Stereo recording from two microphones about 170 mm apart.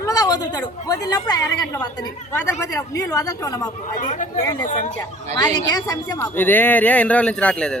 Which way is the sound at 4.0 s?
45° left (ahead or behind).